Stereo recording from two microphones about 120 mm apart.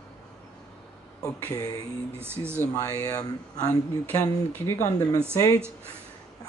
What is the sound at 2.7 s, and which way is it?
Speech, 30° left (ahead or behind).